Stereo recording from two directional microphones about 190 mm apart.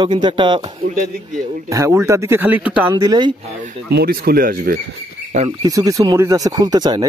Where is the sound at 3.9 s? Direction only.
55° right (ahead or behind).